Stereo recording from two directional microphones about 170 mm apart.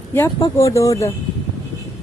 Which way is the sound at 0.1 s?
15° left (ahead or behind).